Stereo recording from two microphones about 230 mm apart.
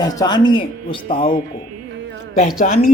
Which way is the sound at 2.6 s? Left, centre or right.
Left.